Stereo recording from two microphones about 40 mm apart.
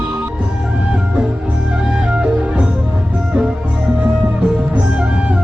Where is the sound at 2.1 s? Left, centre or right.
Right.